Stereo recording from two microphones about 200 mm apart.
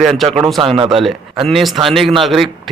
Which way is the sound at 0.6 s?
25° right (ahead or behind).